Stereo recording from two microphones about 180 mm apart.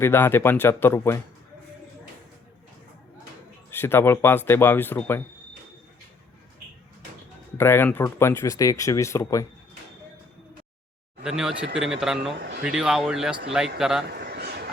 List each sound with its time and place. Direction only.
0.0 s speech: 15° left (ahead or behind)
3.7 s speech: 10° left (ahead or behind)
7.6 s speech: 10° left (ahead or behind)
11.2 s speech: 5° right (ahead or behind)
14.1 s a sound: 65° right (ahead or behind)